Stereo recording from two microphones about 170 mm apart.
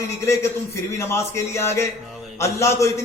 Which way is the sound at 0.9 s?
15° left (ahead or behind).